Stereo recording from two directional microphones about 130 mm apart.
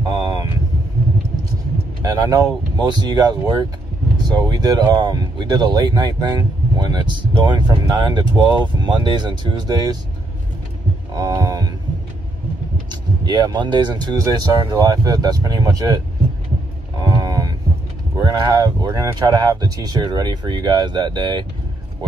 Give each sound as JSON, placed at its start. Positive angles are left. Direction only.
{"t": 0.2, "sound": "vehicle", "side_deg": -35}
{"t": 2.0, "sound": "speech", "side_deg": -30}
{"t": 11.1, "sound": "a sound", "side_deg": -30}
{"t": 13.2, "sound": "speech", "side_deg": -30}
{"t": 17.0, "sound": "cattle", "side_deg": -30}
{"t": 18.1, "sound": "speech", "side_deg": -30}